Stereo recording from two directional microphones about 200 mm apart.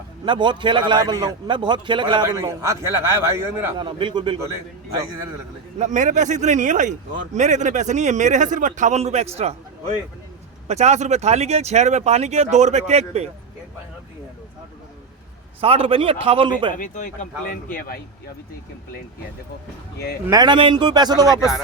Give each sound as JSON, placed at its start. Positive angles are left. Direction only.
{"t": 0.3, "sound": "a man's voice", "side_deg": -25}
{"t": 3.8, "sound": "a man's voice", "side_deg": -25}
{"t": 5.8, "sound": "speech", "side_deg": -40}
{"t": 10.7, "sound": "speech", "side_deg": -35}
{"t": 15.6, "sound": "a man's voice", "side_deg": -30}
{"t": 16.7, "sound": "speech", "side_deg": 40}
{"t": 20.2, "sound": "a man's voice", "side_deg": -20}